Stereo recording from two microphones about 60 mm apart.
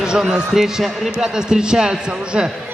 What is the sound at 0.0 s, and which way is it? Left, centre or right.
Speech, centre.